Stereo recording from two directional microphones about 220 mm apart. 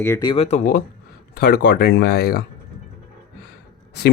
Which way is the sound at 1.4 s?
45° left (ahead or behind).